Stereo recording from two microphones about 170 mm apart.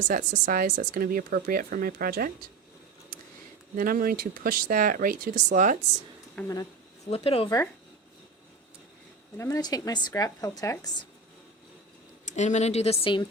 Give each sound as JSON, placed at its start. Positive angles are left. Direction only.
{"t": 0.1, "sound": "speech", "side_deg": -50}
{"t": 3.8, "sound": "speech", "side_deg": -60}
{"t": 6.5, "sound": "a sound", "side_deg": 20}
{"t": 7.1, "sound": "speech", "side_deg": 35}
{"t": 9.4, "sound": "speech", "side_deg": 20}
{"t": 12.2, "sound": "speech", "side_deg": 45}